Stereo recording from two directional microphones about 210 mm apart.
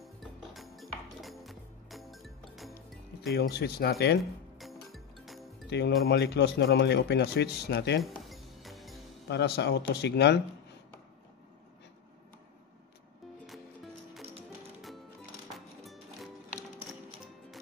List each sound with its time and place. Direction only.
0.0 s music: centre (ahead or behind)
3.3 s speech: 50° left (ahead or behind)
4.2 s music: centre (ahead or behind)
5.7 s speech: 55° left (ahead or behind)
8.0 s music: centre (ahead or behind)
9.3 s speech: 55° left (ahead or behind)
15.5 s music: centre (ahead or behind)